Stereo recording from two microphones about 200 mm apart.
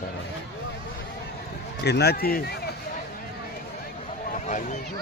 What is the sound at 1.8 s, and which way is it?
Speech, 55° left (ahead or behind).